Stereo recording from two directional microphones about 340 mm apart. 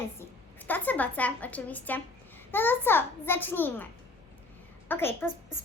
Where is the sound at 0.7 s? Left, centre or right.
Centre.